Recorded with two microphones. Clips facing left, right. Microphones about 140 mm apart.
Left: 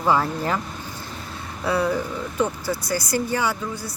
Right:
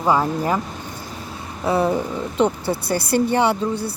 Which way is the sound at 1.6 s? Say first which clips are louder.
Right 3 dB; 25° right (ahead or behind).